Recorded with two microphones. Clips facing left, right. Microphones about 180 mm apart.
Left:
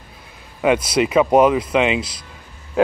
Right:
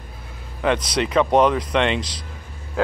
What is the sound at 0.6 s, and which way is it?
Speech, 10° left (ahead or behind).